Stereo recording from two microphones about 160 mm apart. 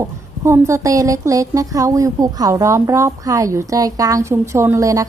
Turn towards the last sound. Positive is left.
turn(degrees=-20)  # may be behind; listen again after turning